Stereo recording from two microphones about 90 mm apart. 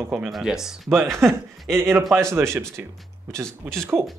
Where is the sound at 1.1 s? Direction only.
30° right (ahead or behind).